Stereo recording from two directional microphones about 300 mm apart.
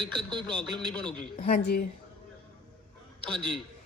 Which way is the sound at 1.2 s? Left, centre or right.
Left.